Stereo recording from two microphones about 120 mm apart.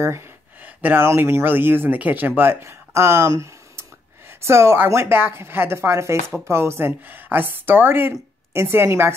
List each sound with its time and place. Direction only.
0.8 s a woman's voice: 20° right (ahead or behind)